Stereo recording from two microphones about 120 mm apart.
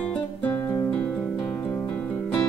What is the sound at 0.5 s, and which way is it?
Guitar, 15° left (ahead or behind).